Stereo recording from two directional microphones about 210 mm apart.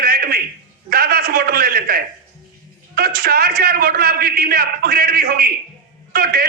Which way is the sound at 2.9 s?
45° right (ahead or behind).